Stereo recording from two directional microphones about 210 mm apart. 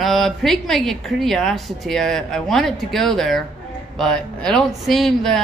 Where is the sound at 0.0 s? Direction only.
Centre (ahead or behind).